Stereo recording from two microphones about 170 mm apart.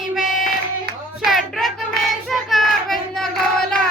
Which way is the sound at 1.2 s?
Centre (ahead or behind).